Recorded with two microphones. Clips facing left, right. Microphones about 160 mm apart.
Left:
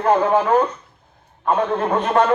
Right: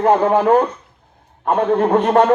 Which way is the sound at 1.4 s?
45° right (ahead or behind).